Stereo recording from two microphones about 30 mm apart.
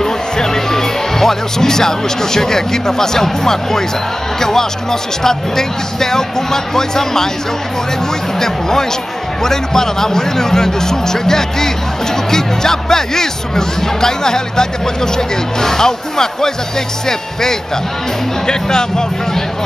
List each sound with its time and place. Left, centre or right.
0.0 s speech: centre
8.4 s speech: centre
18.5 s speech: left